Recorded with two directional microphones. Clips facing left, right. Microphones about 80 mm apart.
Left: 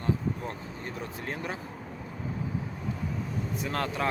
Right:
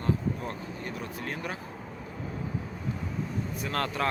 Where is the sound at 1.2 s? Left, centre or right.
Left.